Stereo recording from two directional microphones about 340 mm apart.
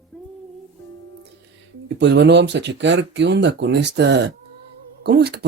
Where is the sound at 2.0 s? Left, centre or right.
Right.